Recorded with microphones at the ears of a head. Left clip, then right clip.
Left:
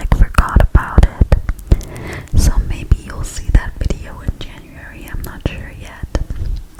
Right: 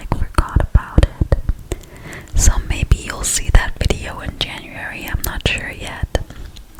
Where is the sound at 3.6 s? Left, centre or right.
Right.